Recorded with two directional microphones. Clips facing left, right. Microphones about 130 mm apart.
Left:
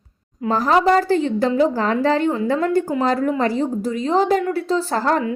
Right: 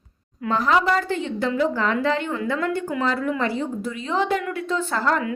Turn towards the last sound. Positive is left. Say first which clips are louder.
# left 3 dB
turn(degrees=35)  # may be behind; listen again after turning